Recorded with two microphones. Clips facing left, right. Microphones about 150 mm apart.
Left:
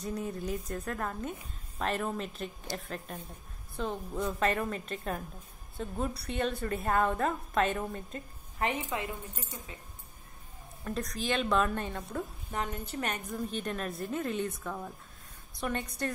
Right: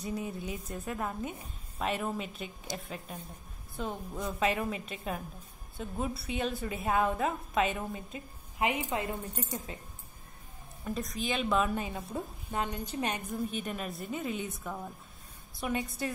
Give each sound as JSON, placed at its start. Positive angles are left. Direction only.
{"t": 0.0, "sound": "a woman's voice", "side_deg": -5}
{"t": 8.8, "sound": "speech", "side_deg": -35}
{"t": 10.8, "sound": "a woman's voice", "side_deg": 0}